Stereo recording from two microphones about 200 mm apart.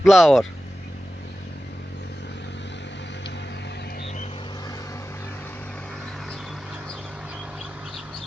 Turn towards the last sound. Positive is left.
turn(degrees=-5)  # may be behind; listen again after turning